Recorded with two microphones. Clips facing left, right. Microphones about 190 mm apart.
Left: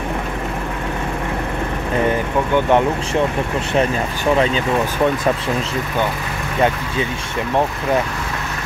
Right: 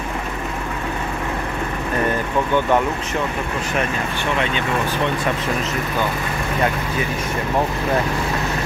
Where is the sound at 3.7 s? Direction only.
35° left (ahead or behind).